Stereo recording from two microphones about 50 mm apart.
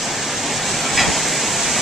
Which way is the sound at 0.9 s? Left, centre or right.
Centre.